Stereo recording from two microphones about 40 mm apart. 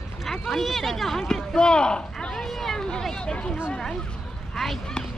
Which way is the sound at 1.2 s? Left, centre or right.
Centre.